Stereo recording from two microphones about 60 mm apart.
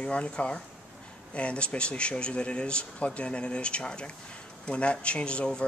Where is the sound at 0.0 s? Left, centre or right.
Centre.